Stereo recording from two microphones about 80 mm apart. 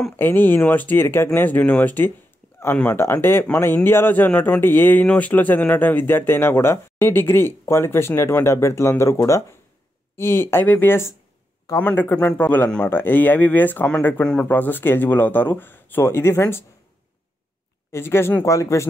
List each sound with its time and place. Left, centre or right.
0.2 s speech: left
14.2 s speech: centre
14.5 s speech: left
17.9 s speech: left